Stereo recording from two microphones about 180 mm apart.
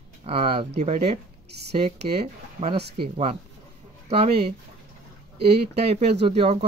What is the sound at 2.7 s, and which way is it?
Speech, 65° right (ahead or behind).